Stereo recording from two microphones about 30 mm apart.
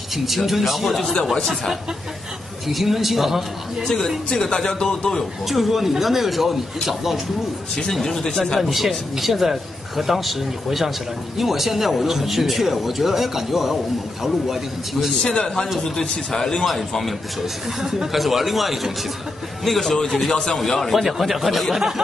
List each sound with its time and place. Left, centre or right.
0.1 s speech: centre
2.7 s speech: centre
3.8 s a man's voice: centre
5.5 s speech: centre
7.9 s a man's voice: centre
8.8 s speech: centre
15.2 s a man's voice: left
16.6 s a man's voice: centre
17.8 s speech: centre
18.1 s speech: centre
19.6 s a man's voice: centre
20.2 s a man's voice: centre
20.9 s speech: centre
21.7 s speech: centre